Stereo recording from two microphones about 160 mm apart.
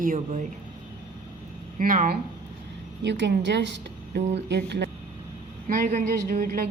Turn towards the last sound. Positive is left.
turn(degrees=-70)  # may be behind; listen again after turning